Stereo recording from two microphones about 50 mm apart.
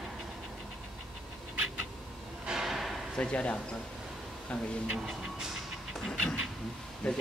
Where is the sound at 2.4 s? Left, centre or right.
Centre.